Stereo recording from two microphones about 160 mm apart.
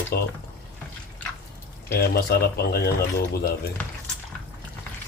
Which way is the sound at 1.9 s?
75° left (ahead or behind).